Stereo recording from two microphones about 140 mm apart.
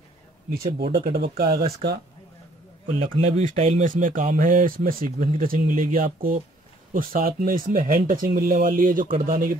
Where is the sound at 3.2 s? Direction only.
50° right (ahead or behind).